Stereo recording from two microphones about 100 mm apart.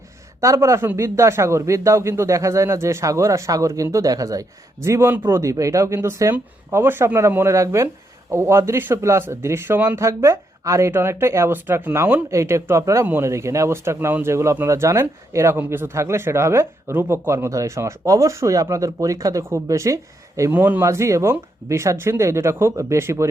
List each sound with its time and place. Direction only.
0.4 s speech: 30° right (ahead or behind)
12.3 s speech: 30° right (ahead or behind)
20.5 s speech: 20° right (ahead or behind)
20.8 s speech: 30° right (ahead or behind)